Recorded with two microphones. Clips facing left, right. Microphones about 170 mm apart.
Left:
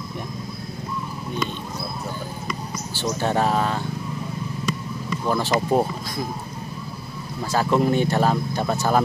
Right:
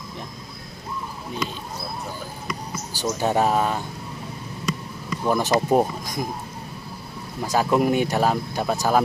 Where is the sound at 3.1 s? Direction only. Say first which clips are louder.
Right 1 dB; 10° right (ahead or behind).